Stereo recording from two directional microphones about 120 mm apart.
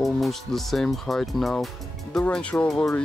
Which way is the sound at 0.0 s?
Centre (ahead or behind).